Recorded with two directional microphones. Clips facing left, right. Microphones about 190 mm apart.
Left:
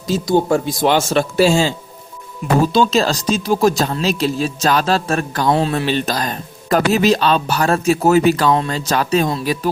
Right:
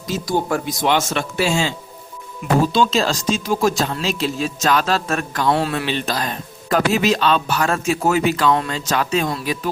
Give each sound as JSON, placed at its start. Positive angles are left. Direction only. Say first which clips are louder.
{"t": 0.1, "sound": "speech", "louder": "left 5 dB", "side_deg": 25}
{"t": 2.7, "sound": "speech", "louder": "left 3 dB", "side_deg": 40}
{"t": 5.8, "sound": "speech", "louder": "left 4 dB", "side_deg": 40}